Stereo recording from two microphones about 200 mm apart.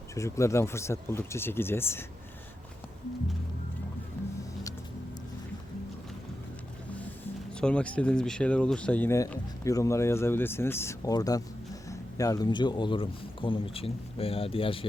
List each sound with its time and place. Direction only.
0.1 s speech: 15° left (ahead or behind)
7.6 s speech: 5° left (ahead or behind); by 14.8 s 25° left (ahead or behind)